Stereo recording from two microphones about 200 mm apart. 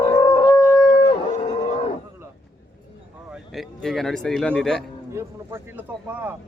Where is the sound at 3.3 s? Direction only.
Centre (ahead or behind).